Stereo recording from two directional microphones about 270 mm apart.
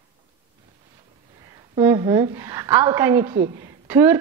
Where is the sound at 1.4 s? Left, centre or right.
Centre.